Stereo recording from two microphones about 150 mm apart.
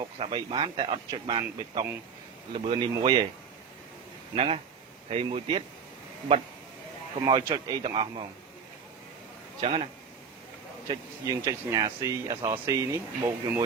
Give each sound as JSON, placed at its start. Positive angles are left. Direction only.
{"t": 0.0, "sound": "speech", "side_deg": -35}
{"t": 4.4, "sound": "speech", "side_deg": -40}
{"t": 7.5, "sound": "speech", "side_deg": -25}
{"t": 9.6, "sound": "speech", "side_deg": -35}
{"t": 10.8, "sound": "speech", "side_deg": -20}